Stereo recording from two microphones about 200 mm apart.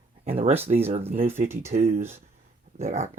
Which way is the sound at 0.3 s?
30° right (ahead or behind).